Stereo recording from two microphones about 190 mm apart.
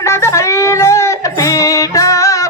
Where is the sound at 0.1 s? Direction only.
15° left (ahead or behind).